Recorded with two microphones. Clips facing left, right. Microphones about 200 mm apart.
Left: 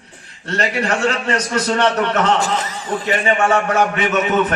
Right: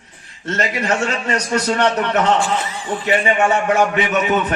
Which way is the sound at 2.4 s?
40° left (ahead or behind).